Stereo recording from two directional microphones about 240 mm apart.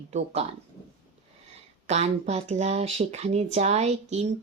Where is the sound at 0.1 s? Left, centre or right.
Right.